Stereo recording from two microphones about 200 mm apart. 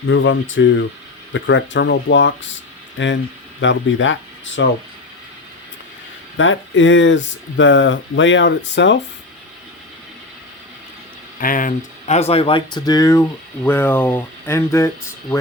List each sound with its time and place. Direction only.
0.1 s speech: 75° left (ahead or behind)
6.3 s speech: 75° left (ahead or behind)
11.3 s speech: 45° left (ahead or behind); by 14.8 s 15° left (ahead or behind)